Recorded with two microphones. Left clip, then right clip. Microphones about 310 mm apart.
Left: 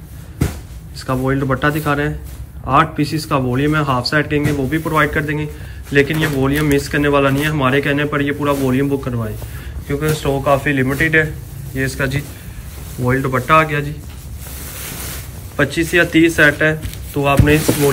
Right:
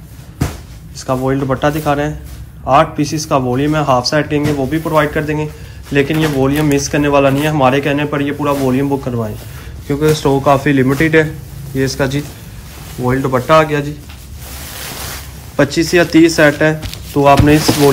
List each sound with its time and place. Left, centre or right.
0.9 s a man's voice: centre
15.5 s a man's voice: centre